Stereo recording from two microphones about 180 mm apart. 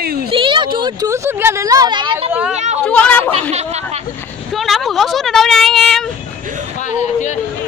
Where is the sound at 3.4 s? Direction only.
35° right (ahead or behind).